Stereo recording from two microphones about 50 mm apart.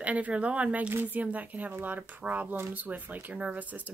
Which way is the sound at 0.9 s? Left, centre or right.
Right.